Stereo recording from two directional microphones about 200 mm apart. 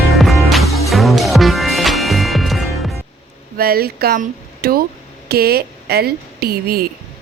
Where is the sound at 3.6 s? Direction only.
50° right (ahead or behind).